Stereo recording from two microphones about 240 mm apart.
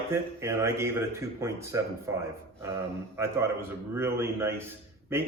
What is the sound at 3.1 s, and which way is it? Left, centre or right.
Speech, centre.